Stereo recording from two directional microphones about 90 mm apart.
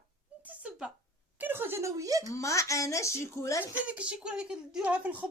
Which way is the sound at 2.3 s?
35° left (ahead or behind).